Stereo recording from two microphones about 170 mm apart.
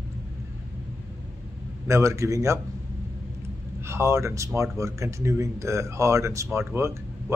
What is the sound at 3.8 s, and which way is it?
Speech, 15° right (ahead or behind).